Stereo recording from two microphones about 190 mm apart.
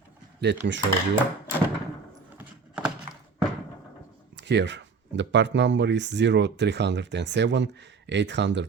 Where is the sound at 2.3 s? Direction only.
5° right (ahead or behind).